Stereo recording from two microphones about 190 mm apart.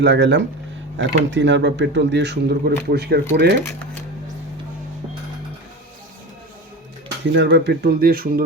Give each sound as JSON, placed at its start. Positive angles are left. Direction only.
{"t": 0.0, "sound": "speech", "side_deg": -65}
{"t": 7.3, "sound": "speech", "side_deg": -65}